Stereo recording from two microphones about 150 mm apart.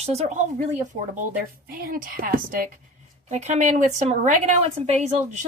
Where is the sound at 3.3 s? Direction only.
50° right (ahead or behind).